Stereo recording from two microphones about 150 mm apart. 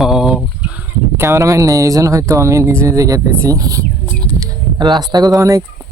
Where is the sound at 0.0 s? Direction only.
Centre (ahead or behind).